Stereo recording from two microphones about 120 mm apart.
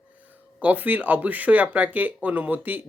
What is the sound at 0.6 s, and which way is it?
Speech, 15° right (ahead or behind).